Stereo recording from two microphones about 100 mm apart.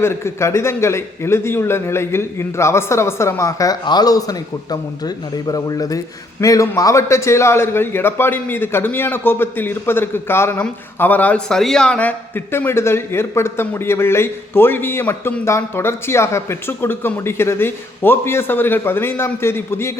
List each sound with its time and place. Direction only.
0.0 s a man's voice: 25° left (ahead or behind)